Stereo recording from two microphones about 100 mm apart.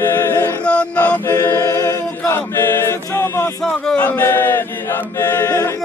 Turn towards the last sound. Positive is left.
turn(degrees=30)  # may be behind; listen again after turning